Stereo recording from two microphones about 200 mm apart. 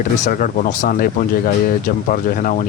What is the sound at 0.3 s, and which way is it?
Speech, 45° left (ahead or behind).